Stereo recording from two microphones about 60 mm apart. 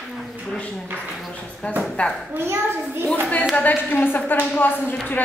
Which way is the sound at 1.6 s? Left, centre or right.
Left.